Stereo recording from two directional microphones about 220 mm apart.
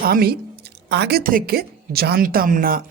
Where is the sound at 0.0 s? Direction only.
45° right (ahead or behind).